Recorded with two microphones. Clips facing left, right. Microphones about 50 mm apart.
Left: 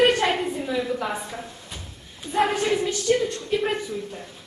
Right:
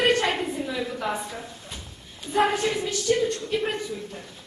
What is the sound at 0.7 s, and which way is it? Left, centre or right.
A woman's voice, centre.